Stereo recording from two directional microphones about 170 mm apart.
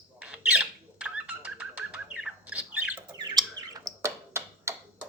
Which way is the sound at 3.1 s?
25° right (ahead or behind).